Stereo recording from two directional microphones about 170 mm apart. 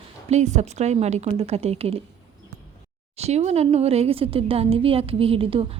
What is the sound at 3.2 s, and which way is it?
A woman's voice, 40° right (ahead or behind).